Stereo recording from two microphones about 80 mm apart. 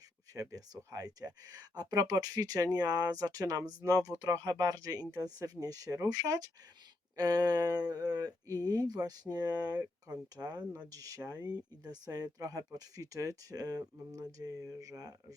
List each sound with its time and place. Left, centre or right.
0.3 s speech: right
10.1 s speech: right